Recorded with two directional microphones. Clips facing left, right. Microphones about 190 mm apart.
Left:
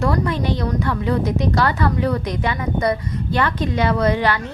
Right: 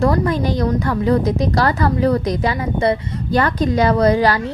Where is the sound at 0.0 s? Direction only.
40° right (ahead or behind).